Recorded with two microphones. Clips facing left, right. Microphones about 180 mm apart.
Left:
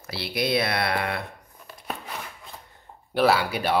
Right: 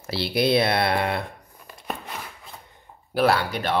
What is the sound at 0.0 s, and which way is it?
Speech, 30° right (ahead or behind).